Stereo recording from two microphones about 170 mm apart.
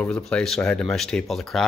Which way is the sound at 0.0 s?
5° left (ahead or behind).